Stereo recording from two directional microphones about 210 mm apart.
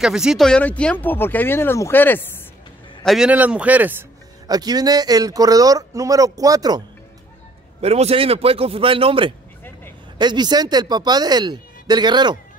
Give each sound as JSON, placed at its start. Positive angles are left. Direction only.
{"t": 0.0, "sound": "speech", "side_deg": -5}
{"t": 3.0, "sound": "speech", "side_deg": 0}
{"t": 4.5, "sound": "speech", "side_deg": -20}
{"t": 7.8, "sound": "speech", "side_deg": -30}